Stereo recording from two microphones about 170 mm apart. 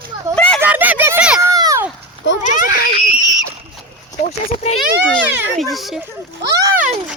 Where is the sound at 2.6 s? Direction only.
60° left (ahead or behind).